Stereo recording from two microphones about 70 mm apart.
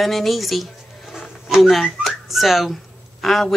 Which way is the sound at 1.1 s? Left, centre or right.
Centre.